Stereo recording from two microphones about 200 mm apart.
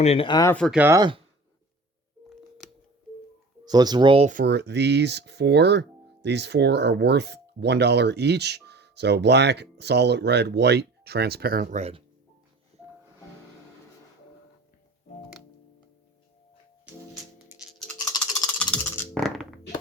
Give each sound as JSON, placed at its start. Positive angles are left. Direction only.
{"t": 0.0, "sound": "speech", "side_deg": 30}
{"t": 0.5, "sound": "speech", "side_deg": 5}
{"t": 0.8, "sound": "speech", "side_deg": -15}
{"t": 3.7, "sound": "speech", "side_deg": -20}
{"t": 4.3, "sound": "speech", "side_deg": -50}
{"t": 17.3, "sound": "music", "side_deg": -5}
{"t": 18.2, "sound": "coin", "side_deg": 5}